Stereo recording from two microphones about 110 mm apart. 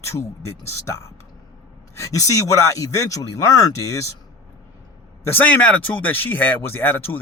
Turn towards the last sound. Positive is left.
turn(degrees=20)  # may be behind; listen again after turning